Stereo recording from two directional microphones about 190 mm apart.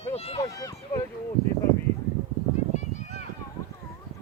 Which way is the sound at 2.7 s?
40° left (ahead or behind).